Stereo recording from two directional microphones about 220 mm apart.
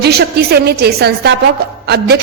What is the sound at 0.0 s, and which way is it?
A woman's voice, 45° right (ahead or behind).